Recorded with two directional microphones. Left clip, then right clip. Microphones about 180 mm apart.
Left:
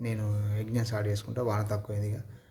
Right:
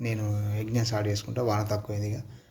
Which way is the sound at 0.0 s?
15° left (ahead or behind).